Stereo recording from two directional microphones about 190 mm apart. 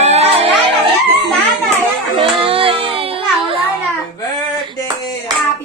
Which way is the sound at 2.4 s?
30° right (ahead or behind).